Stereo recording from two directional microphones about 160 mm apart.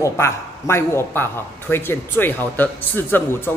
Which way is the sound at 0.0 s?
15° left (ahead or behind).